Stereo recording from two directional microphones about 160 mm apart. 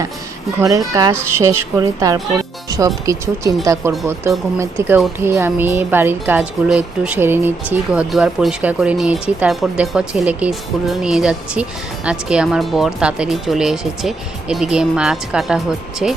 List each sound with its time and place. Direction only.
0.6 s a woman's voice: 20° right (ahead or behind); by 16.1 s 5° right (ahead or behind)